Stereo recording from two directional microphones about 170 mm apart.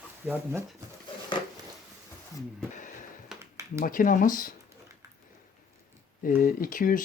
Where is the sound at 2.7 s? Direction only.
50° left (ahead or behind).